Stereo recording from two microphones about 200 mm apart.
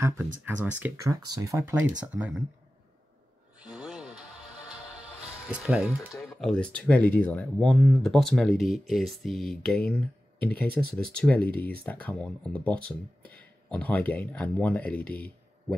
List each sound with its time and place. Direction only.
0.5 s speech: 10° right (ahead or behind)
3.5 s a sound: 5° right (ahead or behind)
5.5 s speech: 5° right (ahead or behind)